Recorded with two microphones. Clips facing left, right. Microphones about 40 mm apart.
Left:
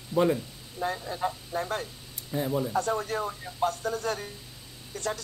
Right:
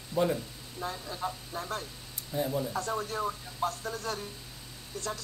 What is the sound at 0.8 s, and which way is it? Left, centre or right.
Speech, left.